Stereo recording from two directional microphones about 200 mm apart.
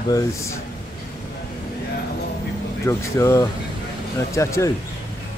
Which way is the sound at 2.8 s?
15° left (ahead or behind).